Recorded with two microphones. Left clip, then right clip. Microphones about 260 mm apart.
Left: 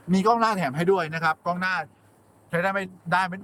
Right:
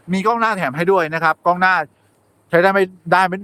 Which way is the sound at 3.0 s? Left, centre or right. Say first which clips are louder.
Right 8 dB; centre.